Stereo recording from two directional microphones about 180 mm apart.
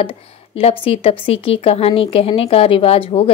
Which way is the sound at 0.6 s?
35° left (ahead or behind).